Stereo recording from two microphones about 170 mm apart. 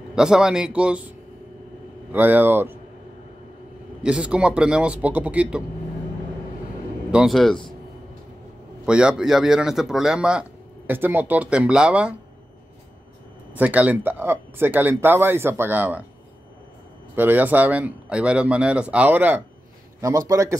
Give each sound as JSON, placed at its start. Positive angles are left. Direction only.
{"t": 0.1, "sound": "a man's voice", "side_deg": -5}
{"t": 2.1, "sound": "speech", "side_deg": -10}
{"t": 4.0, "sound": "a man's voice", "side_deg": -5}
{"t": 7.1, "sound": "a man's voice", "side_deg": -5}
{"t": 8.8, "sound": "a man's voice", "side_deg": -5}
{"t": 13.5, "sound": "speech", "side_deg": -10}
{"t": 17.1, "sound": "speech", "side_deg": -10}